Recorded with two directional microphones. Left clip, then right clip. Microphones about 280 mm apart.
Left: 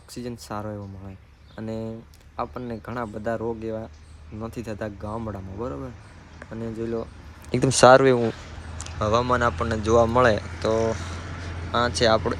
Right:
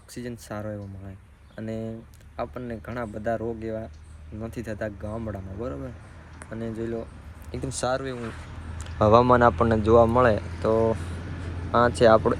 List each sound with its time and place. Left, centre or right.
0.2 s speech: centre
7.5 s speech: left
8.8 s speech: centre